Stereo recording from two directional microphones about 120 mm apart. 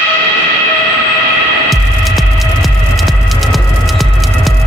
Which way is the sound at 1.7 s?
Centre (ahead or behind).